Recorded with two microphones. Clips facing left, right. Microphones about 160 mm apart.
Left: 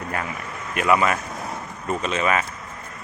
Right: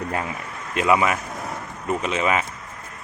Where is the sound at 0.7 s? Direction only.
20° right (ahead or behind).